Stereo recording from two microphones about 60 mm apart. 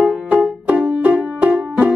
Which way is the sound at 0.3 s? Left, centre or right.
Centre.